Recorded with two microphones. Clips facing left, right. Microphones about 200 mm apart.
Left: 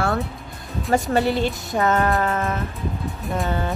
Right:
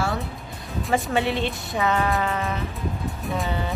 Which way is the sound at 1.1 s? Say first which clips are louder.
Left 3 dB; 40° left (ahead or behind).